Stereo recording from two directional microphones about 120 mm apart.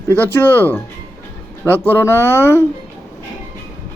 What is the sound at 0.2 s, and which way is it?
A man's voice, 20° left (ahead or behind).